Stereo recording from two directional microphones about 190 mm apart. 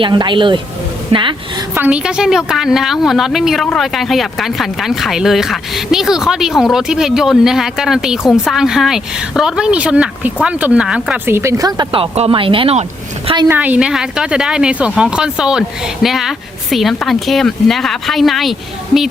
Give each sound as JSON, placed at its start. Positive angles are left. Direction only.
{"t": 0.0, "sound": "speech", "side_deg": -25}
{"t": 1.7, "sound": "a woman's voice", "side_deg": -10}
{"t": 13.5, "sound": "a woman's voice", "side_deg": -10}